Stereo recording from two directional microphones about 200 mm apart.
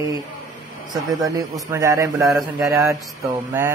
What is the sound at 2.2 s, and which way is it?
Speech, centre (ahead or behind).